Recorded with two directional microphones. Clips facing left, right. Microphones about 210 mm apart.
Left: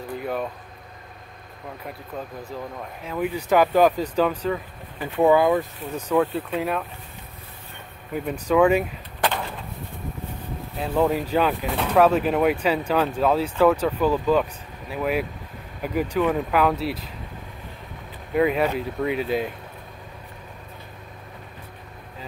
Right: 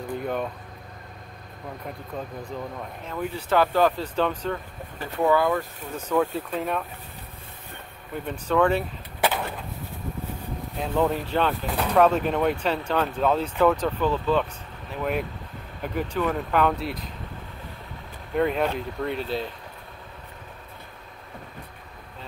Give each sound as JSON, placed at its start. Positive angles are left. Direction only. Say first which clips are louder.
{"t": 0.2, "sound": "a sound", "louder": "left 1 dB", "side_deg": 5}
{"t": 1.8, "sound": "speech", "louder": "even", "side_deg": 5}
{"t": 5.0, "sound": "speech", "louder": "left 4 dB", "side_deg": 20}
{"t": 6.1, "sound": "speech", "louder": "left 2 dB", "side_deg": 0}
{"t": 8.1, "sound": "speech", "louder": "left 4 dB", "side_deg": 10}
{"t": 9.2, "sound": "a sound", "louder": "even", "side_deg": -5}
{"t": 10.8, "sound": "speech", "louder": "left 2 dB", "side_deg": 5}
{"t": 18.3, "sound": "speech", "louder": "left 3 dB", "side_deg": 5}